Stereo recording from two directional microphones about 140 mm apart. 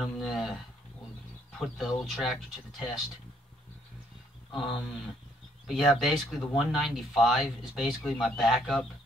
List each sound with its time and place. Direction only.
0.0 s speech: centre (ahead or behind)
1.6 s speech: centre (ahead or behind)
5.7 s speech: centre (ahead or behind)